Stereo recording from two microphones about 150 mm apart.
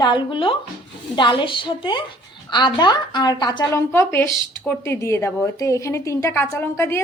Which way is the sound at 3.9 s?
20° left (ahead or behind).